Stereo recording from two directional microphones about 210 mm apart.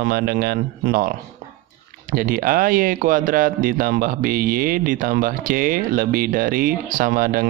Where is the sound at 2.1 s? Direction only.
40° right (ahead or behind).